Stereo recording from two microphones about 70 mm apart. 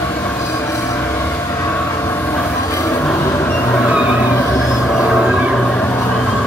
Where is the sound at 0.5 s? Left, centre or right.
Left.